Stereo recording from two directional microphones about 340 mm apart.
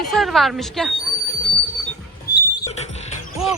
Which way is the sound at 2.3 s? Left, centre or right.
Left.